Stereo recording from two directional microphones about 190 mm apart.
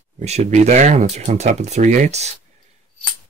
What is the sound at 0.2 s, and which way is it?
Speech, 35° right (ahead or behind).